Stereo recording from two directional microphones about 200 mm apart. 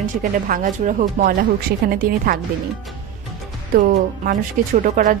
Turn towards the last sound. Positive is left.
turn(degrees=-40)  # may be behind; listen again after turning